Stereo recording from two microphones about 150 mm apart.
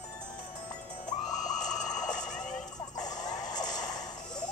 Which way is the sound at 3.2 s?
25° left (ahead or behind).